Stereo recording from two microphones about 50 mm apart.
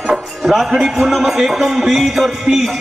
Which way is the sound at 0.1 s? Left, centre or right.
Centre.